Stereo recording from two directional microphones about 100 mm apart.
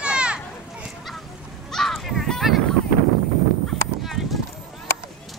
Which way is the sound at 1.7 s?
Centre (ahead or behind).